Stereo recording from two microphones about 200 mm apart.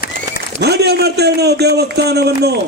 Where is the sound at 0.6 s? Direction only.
55° right (ahead or behind).